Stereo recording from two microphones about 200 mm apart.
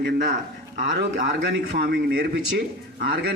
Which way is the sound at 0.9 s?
60° right (ahead or behind).